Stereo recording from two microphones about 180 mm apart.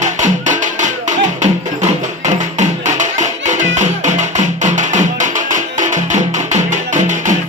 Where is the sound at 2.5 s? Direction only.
40° right (ahead or behind).